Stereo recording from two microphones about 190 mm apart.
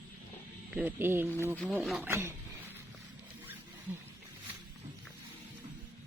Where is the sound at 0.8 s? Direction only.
10° right (ahead or behind).